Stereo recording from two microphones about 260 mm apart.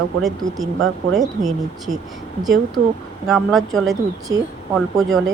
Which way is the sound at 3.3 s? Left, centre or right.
Centre.